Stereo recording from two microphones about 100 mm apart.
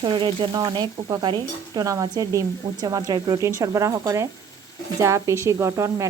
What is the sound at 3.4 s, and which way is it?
Speech, 30° right (ahead or behind).